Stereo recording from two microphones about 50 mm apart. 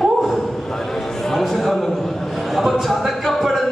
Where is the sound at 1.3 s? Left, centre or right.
Centre.